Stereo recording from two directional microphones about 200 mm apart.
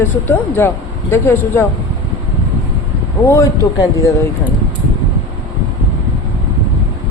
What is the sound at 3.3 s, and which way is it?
Speech, 15° left (ahead or behind).